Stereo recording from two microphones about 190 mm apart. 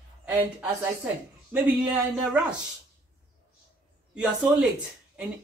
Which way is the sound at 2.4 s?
5° right (ahead or behind).